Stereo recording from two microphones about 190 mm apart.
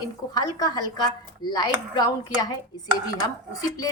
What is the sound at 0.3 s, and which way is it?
A woman's voice, 20° left (ahead or behind).